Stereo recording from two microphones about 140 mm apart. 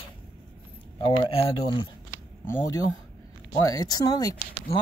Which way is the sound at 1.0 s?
40° left (ahead or behind).